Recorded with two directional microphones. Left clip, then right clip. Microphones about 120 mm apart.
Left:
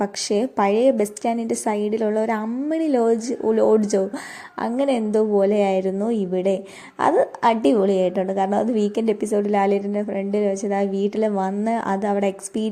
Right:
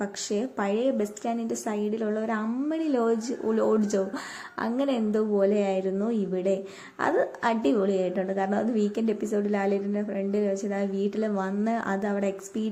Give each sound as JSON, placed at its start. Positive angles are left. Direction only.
{"t": 0.0, "sound": "a woman's voice", "side_deg": 50}